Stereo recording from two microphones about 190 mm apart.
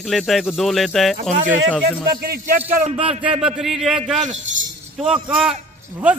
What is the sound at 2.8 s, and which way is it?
Speech, 30° right (ahead or behind).